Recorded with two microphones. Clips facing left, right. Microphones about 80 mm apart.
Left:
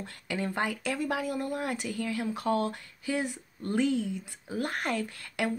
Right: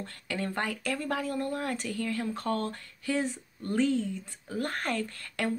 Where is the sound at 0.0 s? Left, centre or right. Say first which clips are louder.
Left 1 dB; centre.